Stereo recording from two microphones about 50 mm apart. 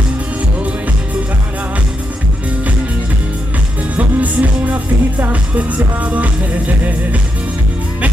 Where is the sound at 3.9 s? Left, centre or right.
Right.